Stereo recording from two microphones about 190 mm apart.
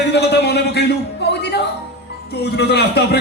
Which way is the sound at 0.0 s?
60° left (ahead or behind).